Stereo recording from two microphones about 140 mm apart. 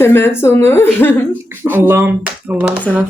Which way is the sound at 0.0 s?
15° left (ahead or behind).